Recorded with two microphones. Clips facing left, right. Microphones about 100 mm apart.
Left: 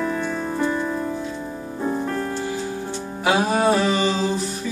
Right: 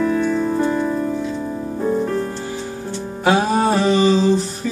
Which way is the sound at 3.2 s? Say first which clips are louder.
Right 3 dB; 35° right (ahead or behind).